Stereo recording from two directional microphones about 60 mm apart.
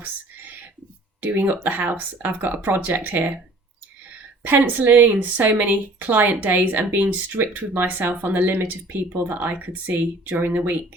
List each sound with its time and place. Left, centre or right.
0.0 s whispering: right
1.2 s speech: right
4.4 s speech: right